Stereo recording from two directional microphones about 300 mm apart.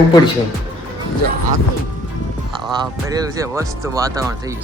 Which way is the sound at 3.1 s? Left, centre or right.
Centre.